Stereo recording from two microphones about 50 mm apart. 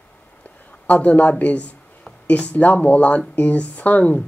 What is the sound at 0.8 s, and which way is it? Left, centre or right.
Speech, left.